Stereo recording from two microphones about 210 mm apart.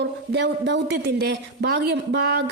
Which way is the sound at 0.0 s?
55° right (ahead or behind).